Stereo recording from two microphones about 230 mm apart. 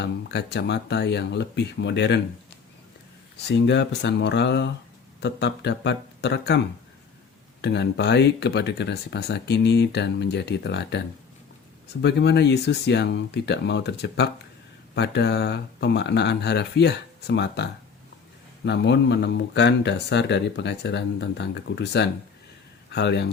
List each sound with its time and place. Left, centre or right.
0.0 s speech: left
3.3 s speech: left
7.6 s speech: left
12.0 s speech: left